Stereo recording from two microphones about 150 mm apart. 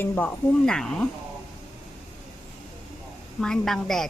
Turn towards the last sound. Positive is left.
turn(degrees=5)  # may be behind; listen again after turning